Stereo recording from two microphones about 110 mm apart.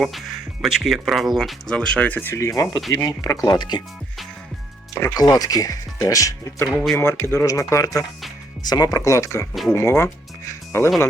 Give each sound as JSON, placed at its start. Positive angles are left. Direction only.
{"t": 0.6, "sound": "speech", "side_deg": -5}
{"t": 5.1, "sound": "speech", "side_deg": 35}
{"t": 6.7, "sound": "speech", "side_deg": 0}
{"t": 6.9, "sound": "speech", "side_deg": 25}